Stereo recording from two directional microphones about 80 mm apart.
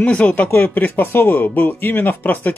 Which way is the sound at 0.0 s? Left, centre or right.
Centre.